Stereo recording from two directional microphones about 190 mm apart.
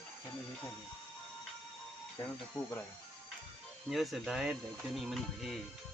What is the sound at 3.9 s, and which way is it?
Speech, centre (ahead or behind).